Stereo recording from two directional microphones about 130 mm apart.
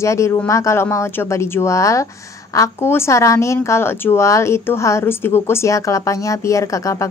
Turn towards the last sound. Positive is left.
turn(degrees=25)  # may be behind; listen again after turning